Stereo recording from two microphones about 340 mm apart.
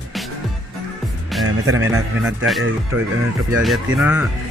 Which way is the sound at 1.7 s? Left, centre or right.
Centre.